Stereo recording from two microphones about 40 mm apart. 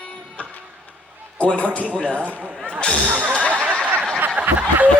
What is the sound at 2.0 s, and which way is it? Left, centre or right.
Speech, right.